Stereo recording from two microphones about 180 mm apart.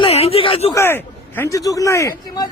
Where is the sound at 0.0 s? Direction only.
35° left (ahead or behind).